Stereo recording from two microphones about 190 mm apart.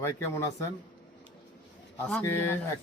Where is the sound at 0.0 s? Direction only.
15° left (ahead or behind).